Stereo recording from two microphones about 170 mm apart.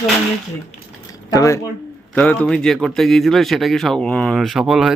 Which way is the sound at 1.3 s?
20° left (ahead or behind).